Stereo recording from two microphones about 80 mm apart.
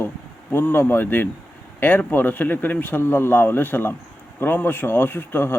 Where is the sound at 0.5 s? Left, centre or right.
Left.